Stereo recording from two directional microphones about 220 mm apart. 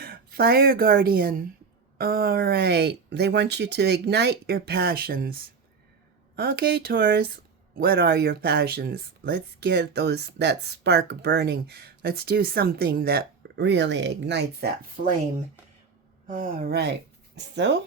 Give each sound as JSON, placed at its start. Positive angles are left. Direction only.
{"t": 0.0, "sound": "speech", "side_deg": -45}
{"t": 16.2, "sound": "speech", "side_deg": -35}